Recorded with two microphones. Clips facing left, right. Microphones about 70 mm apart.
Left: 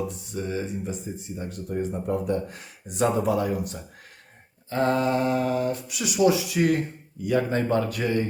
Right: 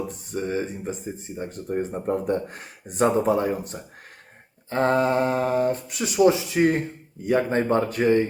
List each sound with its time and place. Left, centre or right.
0.1 s speech: right